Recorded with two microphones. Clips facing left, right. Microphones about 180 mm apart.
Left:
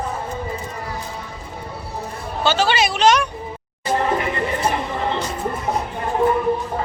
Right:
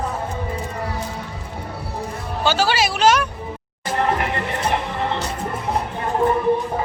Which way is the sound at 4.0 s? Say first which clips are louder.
Right 1 dB; 65° right (ahead or behind).